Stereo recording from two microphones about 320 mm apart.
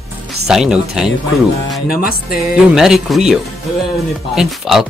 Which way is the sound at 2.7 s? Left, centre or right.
Centre.